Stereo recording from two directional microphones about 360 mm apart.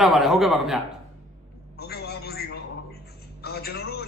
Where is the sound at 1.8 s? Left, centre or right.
Left.